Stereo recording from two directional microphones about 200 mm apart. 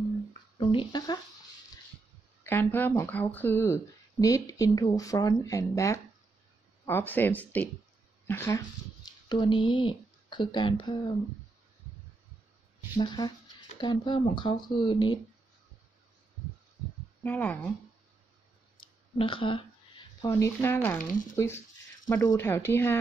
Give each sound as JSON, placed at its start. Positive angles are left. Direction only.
{"t": 0.6, "sound": "speech", "side_deg": 25}
{"t": 2.4, "sound": "speech", "side_deg": 10}
{"t": 9.3, "sound": "speech", "side_deg": 25}
{"t": 12.9, "sound": "speech", "side_deg": 20}
{"t": 17.2, "sound": "speech", "side_deg": 10}
{"t": 18.8, "sound": "a sound", "side_deg": 25}
{"t": 20.2, "sound": "speech", "side_deg": 15}
{"t": 22.0, "sound": "speech", "side_deg": 15}